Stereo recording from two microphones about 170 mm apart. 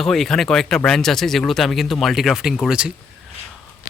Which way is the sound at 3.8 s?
55° left (ahead or behind).